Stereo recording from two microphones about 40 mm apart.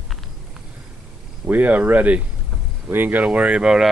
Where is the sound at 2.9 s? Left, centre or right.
Right.